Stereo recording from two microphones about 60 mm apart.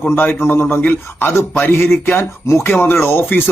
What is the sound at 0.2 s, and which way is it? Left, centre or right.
Speech, left.